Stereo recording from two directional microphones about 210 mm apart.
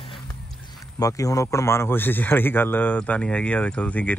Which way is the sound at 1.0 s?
15° left (ahead or behind).